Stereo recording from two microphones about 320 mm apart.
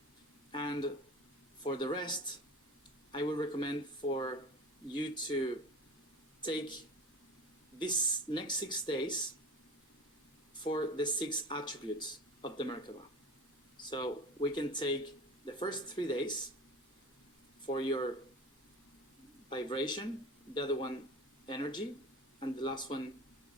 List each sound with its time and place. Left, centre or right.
0.5 s a sound: centre
1.6 s speech: centre
10.6 s speech: centre
17.7 s speech: centre
19.5 s speech: centre